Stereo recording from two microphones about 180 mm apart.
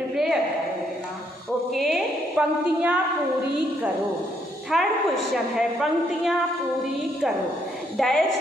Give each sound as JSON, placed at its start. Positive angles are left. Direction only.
{"t": 0.1, "sound": "a sound", "side_deg": 0}
{"t": 1.7, "sound": "a woman's voice", "side_deg": 0}
{"t": 4.6, "sound": "a woman's voice", "side_deg": 0}
{"t": 8.0, "sound": "a woman's voice", "side_deg": 0}